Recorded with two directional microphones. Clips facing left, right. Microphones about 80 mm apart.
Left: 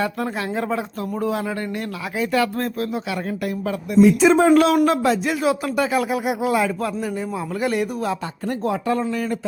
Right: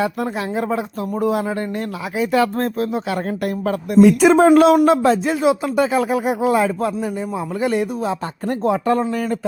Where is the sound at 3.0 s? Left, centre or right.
Right.